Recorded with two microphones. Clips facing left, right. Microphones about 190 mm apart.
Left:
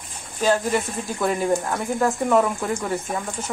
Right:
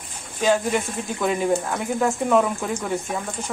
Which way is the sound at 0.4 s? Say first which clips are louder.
Even; 10° right (ahead or behind).